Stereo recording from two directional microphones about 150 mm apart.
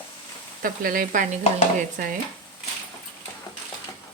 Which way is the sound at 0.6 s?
70° right (ahead or behind).